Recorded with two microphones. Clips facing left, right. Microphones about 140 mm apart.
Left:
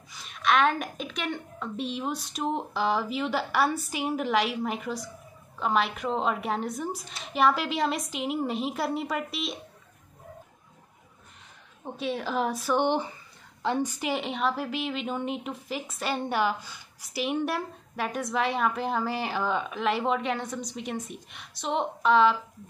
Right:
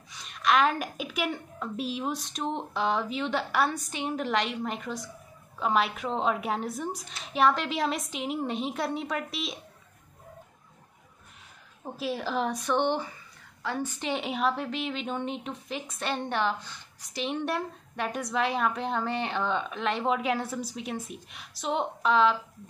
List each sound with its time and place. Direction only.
0.1 s speech: centre (ahead or behind)
11.8 s speech: centre (ahead or behind)
13.6 s a sound: 25° left (ahead or behind)
13.8 s speech: 10° left (ahead or behind)